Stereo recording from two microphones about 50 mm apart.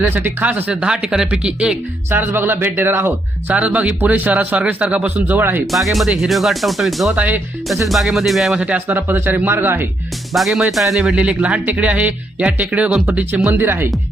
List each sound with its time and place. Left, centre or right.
0.1 s speech: right
0.7 s speech: centre
1.3 s speech: right
2.0 s speech: right
3.5 s speech: right
5.4 s speech: right
5.7 s speech: centre
7.2 s speech: right
7.7 s speech: centre
8.5 s speech: right
8.9 s speech: right
10.3 s speech: centre
11.0 s speech: right